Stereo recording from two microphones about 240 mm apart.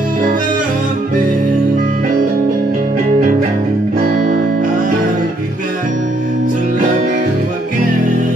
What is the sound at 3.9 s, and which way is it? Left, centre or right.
Music, right.